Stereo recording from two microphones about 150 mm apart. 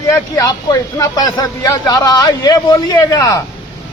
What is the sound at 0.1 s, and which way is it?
Speech, 25° left (ahead or behind).